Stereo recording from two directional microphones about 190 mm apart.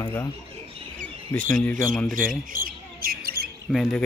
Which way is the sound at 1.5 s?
10° left (ahead or behind).